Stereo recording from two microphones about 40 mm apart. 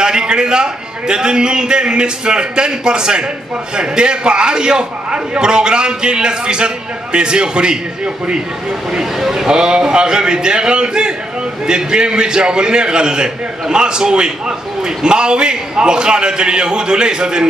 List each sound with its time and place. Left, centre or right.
0.0 s a man's voice: centre
9.2 s a man's voice: centre
9.5 s a man's voice: centre